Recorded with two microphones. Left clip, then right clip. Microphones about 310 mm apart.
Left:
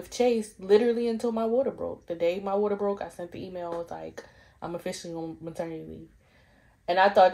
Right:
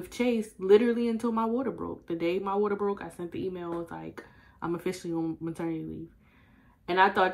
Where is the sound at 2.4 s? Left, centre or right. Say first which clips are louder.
Left 1 dB; left.